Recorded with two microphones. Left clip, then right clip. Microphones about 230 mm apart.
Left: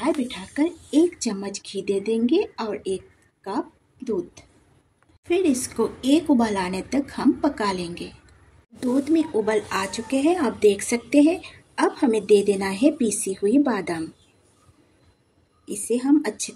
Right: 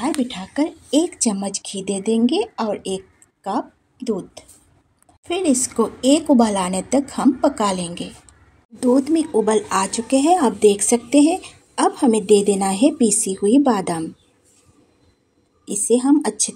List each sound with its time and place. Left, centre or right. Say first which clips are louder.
0.0 s speech: right 2 dB; right
5.3 s speech: right 2 dB; right
15.6 s speech: right 7 dB; right